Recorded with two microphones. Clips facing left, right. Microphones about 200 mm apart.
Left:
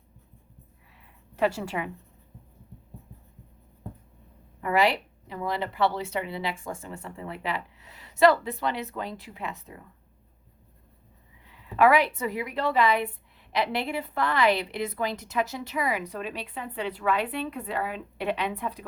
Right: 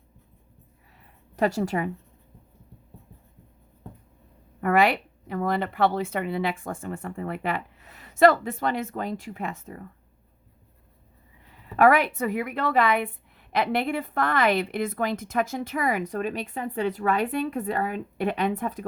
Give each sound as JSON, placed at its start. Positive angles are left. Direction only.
{"t": 1.4, "sound": "a woman's voice", "side_deg": -45}
{"t": 4.6, "sound": "a woman's voice", "side_deg": -55}
{"t": 11.4, "sound": "a woman's voice", "side_deg": -50}